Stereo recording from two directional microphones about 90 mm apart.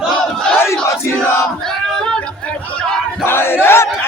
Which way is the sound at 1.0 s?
30° left (ahead or behind).